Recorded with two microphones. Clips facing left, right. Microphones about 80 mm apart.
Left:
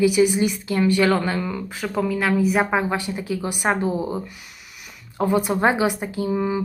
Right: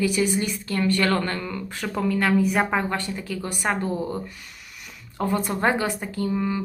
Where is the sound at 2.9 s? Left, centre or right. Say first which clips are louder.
Left 3 dB; centre.